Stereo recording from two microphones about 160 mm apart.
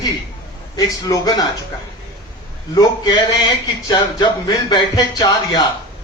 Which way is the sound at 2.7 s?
25° left (ahead or behind).